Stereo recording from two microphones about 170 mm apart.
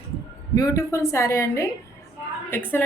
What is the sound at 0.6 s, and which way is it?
A woman's voice, 20° left (ahead or behind).